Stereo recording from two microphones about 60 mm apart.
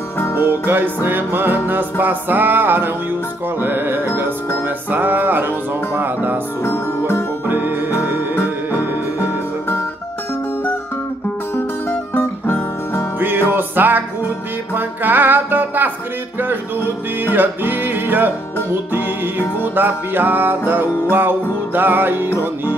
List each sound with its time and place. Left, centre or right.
0.4 s music: right
6.6 s music: left
7.4 s music: right
9.2 s music: left
12.1 s guitar: left
13.2 s music: right